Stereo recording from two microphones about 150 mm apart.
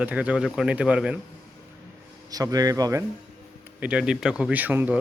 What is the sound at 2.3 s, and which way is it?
Speech, 25° right (ahead or behind).